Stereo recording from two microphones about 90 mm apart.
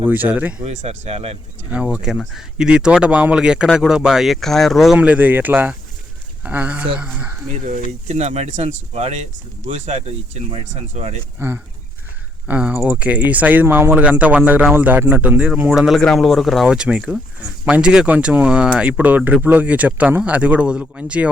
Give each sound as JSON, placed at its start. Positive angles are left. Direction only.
{"t": 0.0, "sound": "speech", "side_deg": -20}
{"t": 0.9, "sound": "speech", "side_deg": -90}
{"t": 1.7, "sound": "speech", "side_deg": -10}
{"t": 4.9, "sound": "speech", "side_deg": -15}
{"t": 11.3, "sound": "speech", "side_deg": -25}
{"t": 12.5, "sound": "speech", "side_deg": -15}
{"t": 15.7, "sound": "speech", "side_deg": -5}